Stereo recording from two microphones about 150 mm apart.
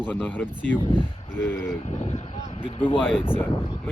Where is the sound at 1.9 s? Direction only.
45° left (ahead or behind).